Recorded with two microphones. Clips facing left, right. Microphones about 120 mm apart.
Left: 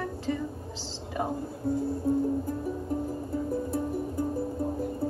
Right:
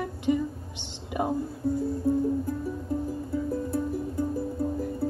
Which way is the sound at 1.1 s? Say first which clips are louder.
Right 3 dB; 15° right (ahead or behind).